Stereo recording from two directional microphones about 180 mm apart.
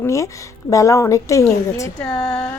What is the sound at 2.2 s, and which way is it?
Speech, 5° left (ahead or behind).